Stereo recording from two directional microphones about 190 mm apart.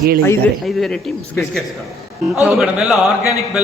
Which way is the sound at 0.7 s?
Centre (ahead or behind).